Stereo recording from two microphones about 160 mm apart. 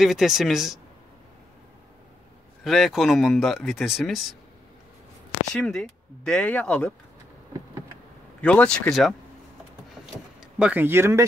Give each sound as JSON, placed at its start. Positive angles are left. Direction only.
{"t": 0.0, "sound": "speech", "side_deg": 0}
{"t": 2.6, "sound": "speech", "side_deg": 0}
{"t": 5.5, "sound": "speech", "side_deg": 5}
{"t": 8.4, "sound": "speech", "side_deg": 5}
{"t": 10.4, "sound": "speech", "side_deg": -10}